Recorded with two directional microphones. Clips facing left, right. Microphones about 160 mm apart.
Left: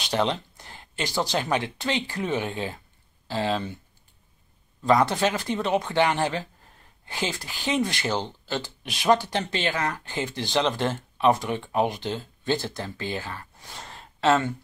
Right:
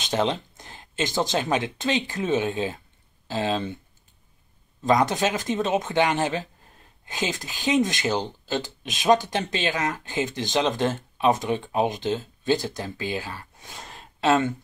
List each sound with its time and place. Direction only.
0.0 s speech: 20° right (ahead or behind)
4.8 s speech: 15° right (ahead or behind)